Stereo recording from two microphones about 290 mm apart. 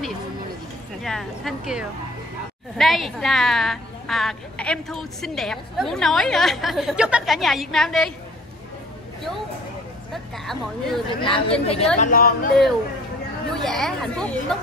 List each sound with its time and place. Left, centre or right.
1.0 s a woman's voice: centre
10.1 s a woman's voice: centre
11.1 s a woman's voice: centre
13.6 s a woman's voice: centre